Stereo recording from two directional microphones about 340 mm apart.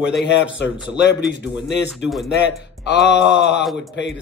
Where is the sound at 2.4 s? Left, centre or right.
Left.